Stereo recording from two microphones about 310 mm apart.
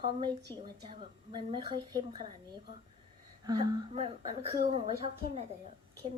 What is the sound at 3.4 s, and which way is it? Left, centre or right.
A woman's voice, centre.